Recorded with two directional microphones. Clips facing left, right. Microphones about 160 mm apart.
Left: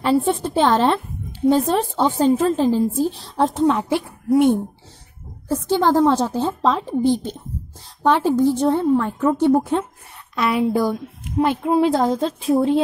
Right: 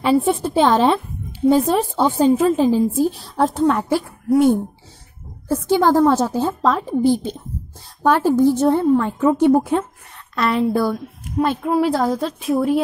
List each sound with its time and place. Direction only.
0.0 s a woman's voice: 10° right (ahead or behind)
5.5 s a woman's voice: 10° right (ahead or behind)
8.8 s a woman's voice: 5° left (ahead or behind)
9.2 s a woman's voice: 10° right (ahead or behind)
10.3 s a woman's voice: 5° left (ahead or behind); by 12.8 s 25° left (ahead or behind)